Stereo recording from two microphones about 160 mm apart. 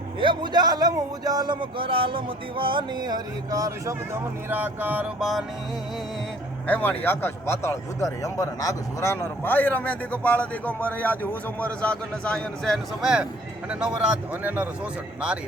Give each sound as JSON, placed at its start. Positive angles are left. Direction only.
{"t": 0.2, "sound": "a man's voice", "side_deg": -30}
{"t": 6.7, "sound": "speech", "side_deg": 10}